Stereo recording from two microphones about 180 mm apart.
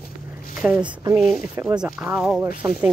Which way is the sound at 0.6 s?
5° right (ahead or behind).